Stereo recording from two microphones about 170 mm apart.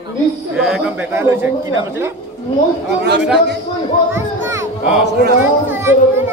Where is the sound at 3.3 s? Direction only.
90° right.